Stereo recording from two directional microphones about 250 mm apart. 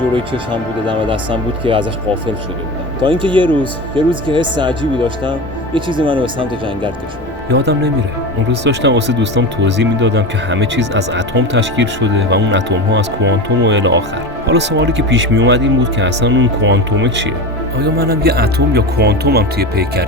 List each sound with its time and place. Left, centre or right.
0.5 s speech: centre
3.0 s speech: centre
7.5 s speech: right